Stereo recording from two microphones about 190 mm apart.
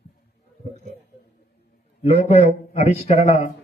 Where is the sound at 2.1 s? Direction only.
35° left (ahead or behind).